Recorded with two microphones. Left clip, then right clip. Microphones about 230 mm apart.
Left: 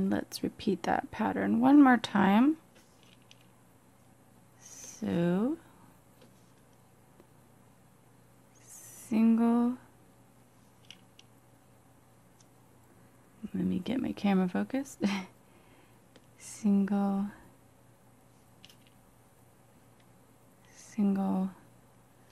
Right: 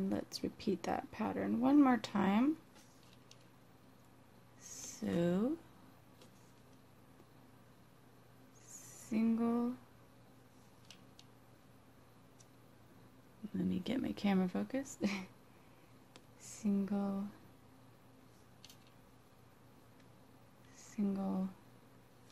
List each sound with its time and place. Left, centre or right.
0.1 s speech: left
4.9 s speech: centre
8.9 s a sound: left
13.6 s speech: centre
16.3 s a sound: left
20.7 s speech: left